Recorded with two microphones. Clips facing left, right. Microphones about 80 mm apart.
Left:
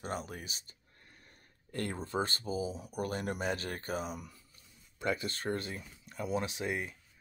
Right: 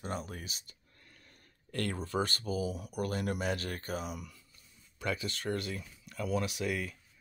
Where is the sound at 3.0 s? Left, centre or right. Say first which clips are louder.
Right 1 dB; left.